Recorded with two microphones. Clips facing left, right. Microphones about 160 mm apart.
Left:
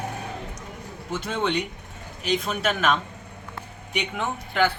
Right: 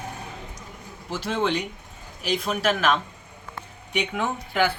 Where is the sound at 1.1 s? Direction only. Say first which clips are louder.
Right 1 dB; centre (ahead or behind).